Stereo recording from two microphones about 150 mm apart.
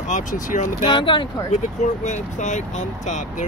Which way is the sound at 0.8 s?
35° left (ahead or behind).